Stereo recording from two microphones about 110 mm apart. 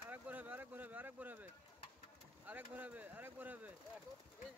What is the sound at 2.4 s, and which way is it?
Speech, 15° right (ahead or behind).